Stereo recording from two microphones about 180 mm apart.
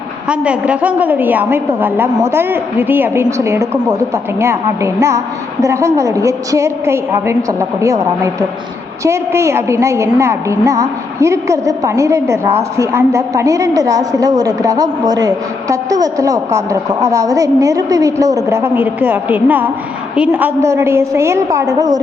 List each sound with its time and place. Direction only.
0.3 s a woman's voice: 5° right (ahead or behind)